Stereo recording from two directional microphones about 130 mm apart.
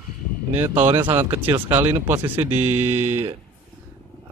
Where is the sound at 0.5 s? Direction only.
15° right (ahead or behind).